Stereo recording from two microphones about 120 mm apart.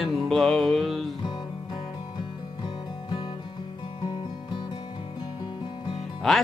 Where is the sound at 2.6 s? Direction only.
35° left (ahead or behind).